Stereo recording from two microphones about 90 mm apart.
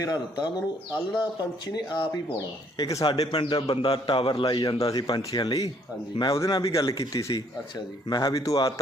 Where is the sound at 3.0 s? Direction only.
90° left; by 3.7 s 60° left (ahead or behind).